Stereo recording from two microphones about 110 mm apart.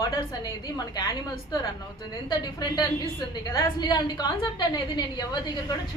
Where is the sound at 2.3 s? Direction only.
40° left (ahead or behind).